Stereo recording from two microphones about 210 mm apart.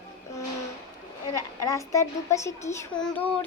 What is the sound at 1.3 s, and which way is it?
Child singing, 15° left (ahead or behind).